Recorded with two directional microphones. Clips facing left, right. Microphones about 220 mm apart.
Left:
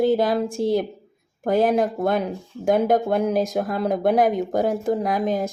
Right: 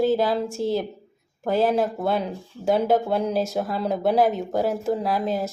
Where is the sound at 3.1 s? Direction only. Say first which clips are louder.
Left 2 dB; 15° left (ahead or behind).